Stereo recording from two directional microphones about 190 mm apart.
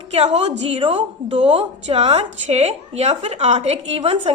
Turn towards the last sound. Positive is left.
turn(degrees=-35)  # may be behind; listen again after turning